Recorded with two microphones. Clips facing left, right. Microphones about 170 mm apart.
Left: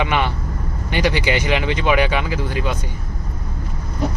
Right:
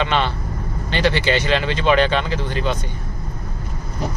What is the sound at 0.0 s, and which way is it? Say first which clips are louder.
Speech: even; 10° left (ahead or behind).